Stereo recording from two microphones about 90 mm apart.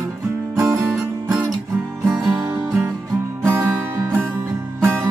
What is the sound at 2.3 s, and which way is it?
Music, 20° right (ahead or behind).